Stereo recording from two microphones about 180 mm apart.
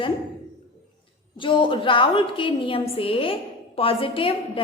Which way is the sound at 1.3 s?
25° left (ahead or behind).